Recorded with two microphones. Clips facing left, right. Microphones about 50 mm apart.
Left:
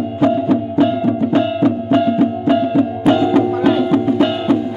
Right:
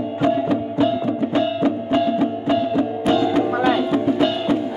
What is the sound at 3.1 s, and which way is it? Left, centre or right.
Music, left.